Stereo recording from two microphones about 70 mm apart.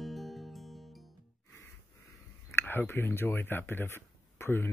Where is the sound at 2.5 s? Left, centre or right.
Left.